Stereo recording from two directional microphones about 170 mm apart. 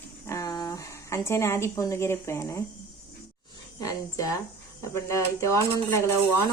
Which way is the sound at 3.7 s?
20° left (ahead or behind).